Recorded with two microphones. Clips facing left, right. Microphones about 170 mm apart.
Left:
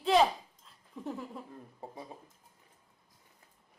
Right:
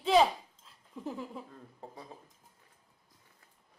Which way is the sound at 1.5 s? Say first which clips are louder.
Left 2 dB; 15° left (ahead or behind).